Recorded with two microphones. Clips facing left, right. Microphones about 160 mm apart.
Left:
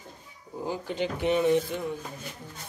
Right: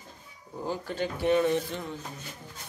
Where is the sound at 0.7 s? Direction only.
15° left (ahead or behind).